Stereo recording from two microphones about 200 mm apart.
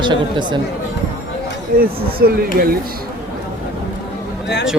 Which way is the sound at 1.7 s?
50° right (ahead or behind).